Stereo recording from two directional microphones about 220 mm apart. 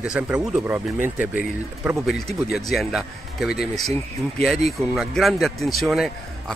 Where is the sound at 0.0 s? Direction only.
5° right (ahead or behind).